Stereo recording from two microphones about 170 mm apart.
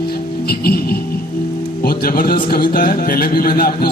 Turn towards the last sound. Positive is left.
turn(degrees=60)  # may be behind; listen again after turning